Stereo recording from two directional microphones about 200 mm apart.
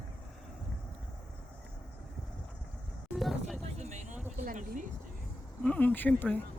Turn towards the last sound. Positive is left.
turn(degrees=10)  # may be behind; listen again after turning